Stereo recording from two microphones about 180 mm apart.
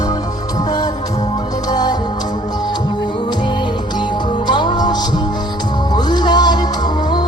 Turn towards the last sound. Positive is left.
turn(degrees=25)  # may be behind; listen again after turning